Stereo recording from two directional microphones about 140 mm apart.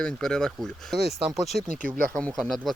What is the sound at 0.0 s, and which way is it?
Speech, 5° left (ahead or behind).